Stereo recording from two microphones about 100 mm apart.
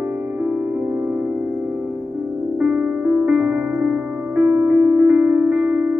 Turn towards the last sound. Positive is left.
turn(degrees=-15)  # may be behind; listen again after turning